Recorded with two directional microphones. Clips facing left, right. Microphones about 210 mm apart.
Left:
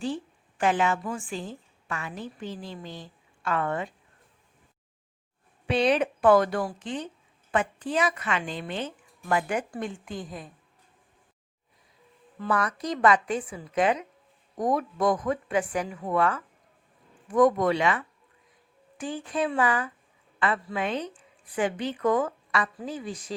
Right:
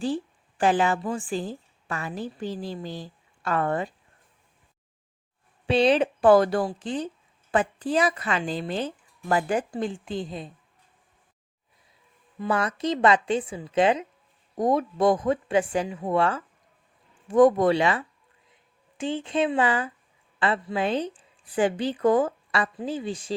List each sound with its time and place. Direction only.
0.6 s a woman's voice: 35° right (ahead or behind)
5.6 s a woman's voice: 30° right (ahead or behind)
12.5 s a woman's voice: 25° right (ahead or behind)